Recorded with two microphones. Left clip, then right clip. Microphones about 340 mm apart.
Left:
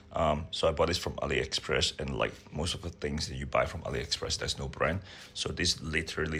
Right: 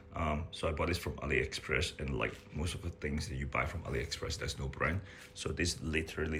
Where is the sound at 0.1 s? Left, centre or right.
Centre.